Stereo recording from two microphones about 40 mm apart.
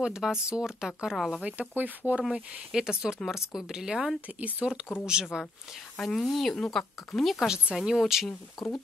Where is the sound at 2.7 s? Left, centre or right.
Centre.